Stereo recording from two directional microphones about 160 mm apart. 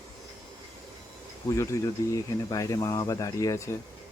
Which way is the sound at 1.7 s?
20° left (ahead or behind).